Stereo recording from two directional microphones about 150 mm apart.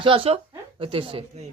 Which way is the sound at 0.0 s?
35° right (ahead or behind).